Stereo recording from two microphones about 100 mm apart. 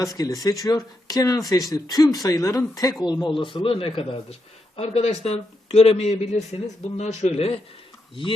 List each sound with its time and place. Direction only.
0.0 s speech: 35° left (ahead or behind)
3.0 s speech: 45° left (ahead or behind); by 4.4 s 70° left (ahead or behind)
4.8 s a man's voice: 85° left